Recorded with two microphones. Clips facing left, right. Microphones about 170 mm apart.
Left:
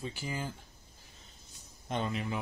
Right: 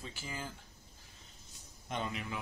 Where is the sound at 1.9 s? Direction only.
30° left (ahead or behind).